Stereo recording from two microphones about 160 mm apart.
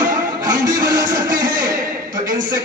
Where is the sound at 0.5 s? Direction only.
20° right (ahead or behind).